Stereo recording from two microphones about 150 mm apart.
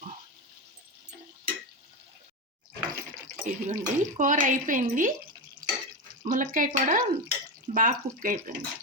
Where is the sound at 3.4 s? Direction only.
60° right (ahead or behind).